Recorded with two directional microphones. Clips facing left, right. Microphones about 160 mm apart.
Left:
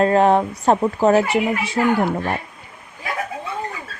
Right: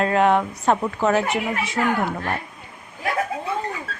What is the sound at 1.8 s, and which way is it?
Speech, 20° left (ahead or behind).